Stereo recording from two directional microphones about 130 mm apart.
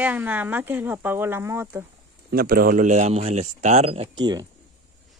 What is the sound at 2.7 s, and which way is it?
Speech, 70° right (ahead or behind).